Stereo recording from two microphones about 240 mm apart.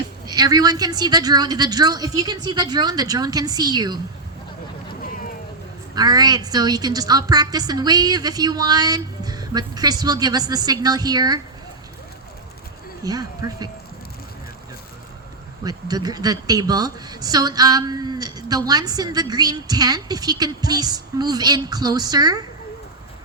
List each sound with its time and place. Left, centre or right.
0.3 s a woman's voice: centre
5.9 s a woman's voice: centre
13.1 s a woman's voice: centre
15.6 s a woman's voice: centre